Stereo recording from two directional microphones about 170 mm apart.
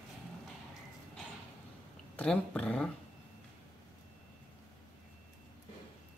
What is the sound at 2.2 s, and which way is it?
Speech, 5° left (ahead or behind).